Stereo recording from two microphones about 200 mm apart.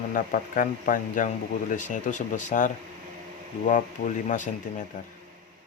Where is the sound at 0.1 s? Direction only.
45° left (ahead or behind).